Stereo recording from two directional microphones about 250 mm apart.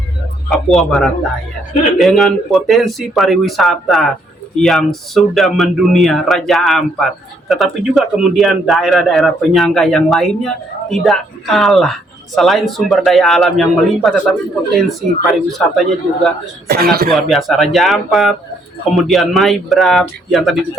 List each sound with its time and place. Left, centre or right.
0.5 s speech: centre
16.6 s speech: right
17.1 s speech: centre